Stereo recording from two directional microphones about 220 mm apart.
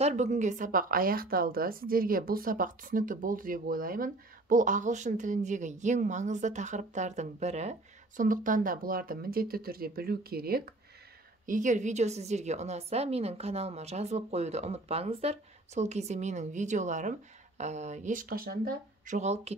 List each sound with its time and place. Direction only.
0.0 s a woman's voice: 30° right (ahead or behind)